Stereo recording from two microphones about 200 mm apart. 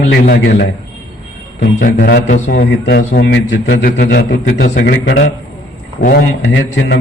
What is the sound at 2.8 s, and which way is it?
A man's voice, 65° left (ahead or behind).